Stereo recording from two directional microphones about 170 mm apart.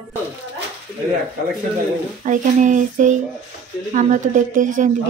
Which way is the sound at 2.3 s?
50° right (ahead or behind).